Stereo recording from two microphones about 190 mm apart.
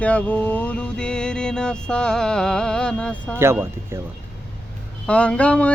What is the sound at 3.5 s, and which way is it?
Speech, 10° right (ahead or behind).